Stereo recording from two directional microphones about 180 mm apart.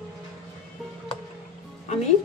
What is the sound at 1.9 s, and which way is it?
Music, 40° left (ahead or behind).